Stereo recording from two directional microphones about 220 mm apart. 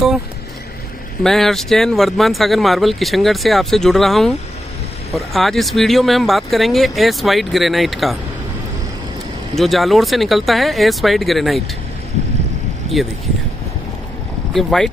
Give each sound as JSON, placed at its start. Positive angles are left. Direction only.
{"t": 1.2, "sound": "speech", "side_deg": 0}
{"t": 9.6, "sound": "speech", "side_deg": 0}
{"t": 14.5, "sound": "speech", "side_deg": 0}